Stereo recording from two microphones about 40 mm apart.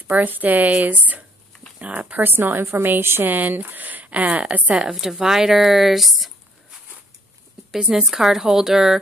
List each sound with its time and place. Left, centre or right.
0.1 s speech: right
2.2 s a woman's voice: right
3.3 s speech: right
5.0 s speech: centre
7.9 s a woman's voice: centre